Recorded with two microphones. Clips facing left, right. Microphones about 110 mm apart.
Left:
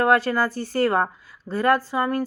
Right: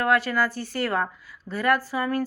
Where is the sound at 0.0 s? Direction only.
30° left (ahead or behind).